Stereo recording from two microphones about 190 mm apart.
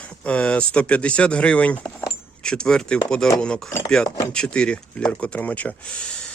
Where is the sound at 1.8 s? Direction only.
20° left (ahead or behind).